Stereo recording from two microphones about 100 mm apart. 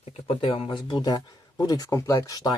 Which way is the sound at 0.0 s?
75° left (ahead or behind).